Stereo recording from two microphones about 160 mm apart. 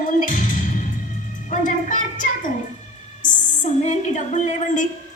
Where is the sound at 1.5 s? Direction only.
55° left (ahead or behind).